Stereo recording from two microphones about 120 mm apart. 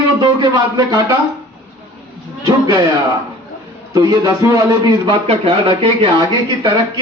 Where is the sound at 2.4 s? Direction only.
35° right (ahead or behind).